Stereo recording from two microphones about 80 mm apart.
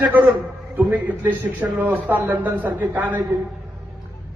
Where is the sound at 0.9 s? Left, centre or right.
Right.